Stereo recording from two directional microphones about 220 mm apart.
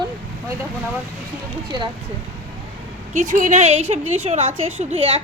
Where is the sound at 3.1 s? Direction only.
35° right (ahead or behind).